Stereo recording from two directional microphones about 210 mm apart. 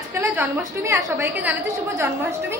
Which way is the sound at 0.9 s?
10° right (ahead or behind).